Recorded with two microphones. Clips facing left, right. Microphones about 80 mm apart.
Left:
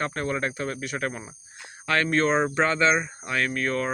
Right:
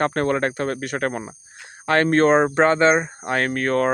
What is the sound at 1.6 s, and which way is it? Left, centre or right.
Speech, right.